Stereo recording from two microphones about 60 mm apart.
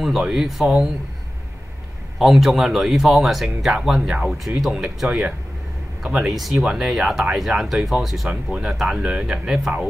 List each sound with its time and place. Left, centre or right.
0.2 s speech: centre
2.1 s speech: centre
8.3 s speech: centre
8.6 s speech: centre